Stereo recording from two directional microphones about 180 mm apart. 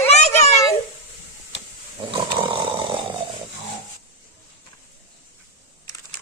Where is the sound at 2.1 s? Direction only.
25° right (ahead or behind).